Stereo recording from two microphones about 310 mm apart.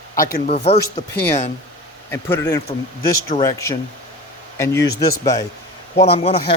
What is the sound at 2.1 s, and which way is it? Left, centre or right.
Speech, centre.